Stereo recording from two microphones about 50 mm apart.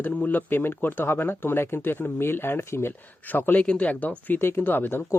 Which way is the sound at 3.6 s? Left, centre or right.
Centre.